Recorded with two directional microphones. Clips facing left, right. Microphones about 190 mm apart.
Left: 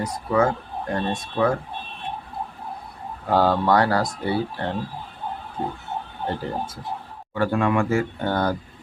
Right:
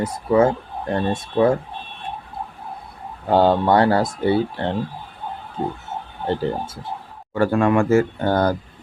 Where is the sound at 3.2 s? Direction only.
25° right (ahead or behind).